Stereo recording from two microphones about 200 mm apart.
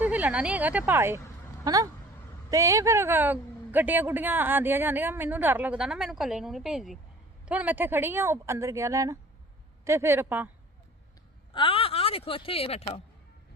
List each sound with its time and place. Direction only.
0.0 s speech: 10° right (ahead or behind)
11.5 s speech: 25° left (ahead or behind)